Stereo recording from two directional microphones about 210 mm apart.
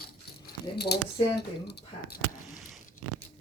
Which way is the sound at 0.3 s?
50° left (ahead or behind).